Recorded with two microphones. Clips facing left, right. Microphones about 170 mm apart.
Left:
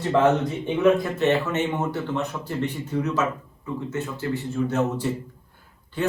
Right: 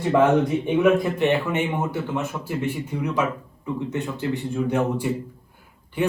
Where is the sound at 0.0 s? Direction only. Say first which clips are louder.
Right 2 dB; 10° right (ahead or behind).